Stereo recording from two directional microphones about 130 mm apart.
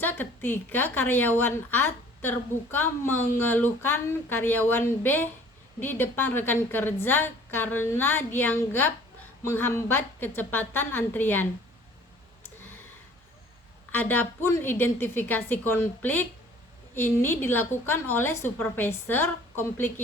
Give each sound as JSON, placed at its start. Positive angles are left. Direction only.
{"t": 0.0, "sound": "a woman's voice", "side_deg": 15}
{"t": 13.9, "sound": "a woman's voice", "side_deg": 15}